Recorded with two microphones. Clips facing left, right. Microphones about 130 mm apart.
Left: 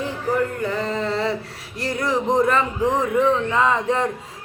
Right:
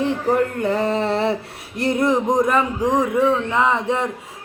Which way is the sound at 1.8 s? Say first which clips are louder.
Right 5 dB; 20° right (ahead or behind).